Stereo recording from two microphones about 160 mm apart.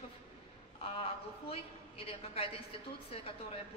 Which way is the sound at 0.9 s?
35° left (ahead or behind).